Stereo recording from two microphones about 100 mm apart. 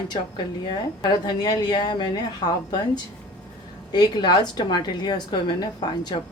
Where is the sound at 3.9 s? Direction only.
45° left (ahead or behind).